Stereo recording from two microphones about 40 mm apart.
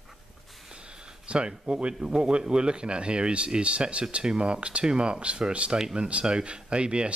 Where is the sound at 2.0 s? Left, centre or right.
Centre.